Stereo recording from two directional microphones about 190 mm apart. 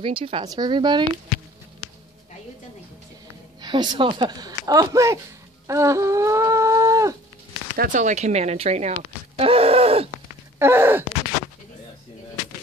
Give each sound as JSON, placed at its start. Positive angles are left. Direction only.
{"t": 0.0, "sound": "speech", "side_deg": -30}
{"t": 3.6, "sound": "speech", "side_deg": -20}
{"t": 7.7, "sound": "speech", "side_deg": -45}
{"t": 10.6, "sound": "speech", "side_deg": -10}